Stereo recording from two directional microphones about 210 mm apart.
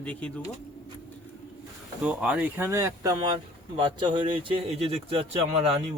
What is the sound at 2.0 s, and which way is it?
Speech, 5° right (ahead or behind).